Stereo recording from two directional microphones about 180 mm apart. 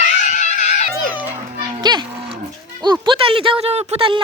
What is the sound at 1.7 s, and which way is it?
Cattle, 25° right (ahead or behind).